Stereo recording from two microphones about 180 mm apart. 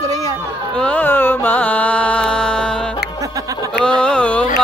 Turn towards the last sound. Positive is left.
turn(degrees=5)  # may be behind; listen again after turning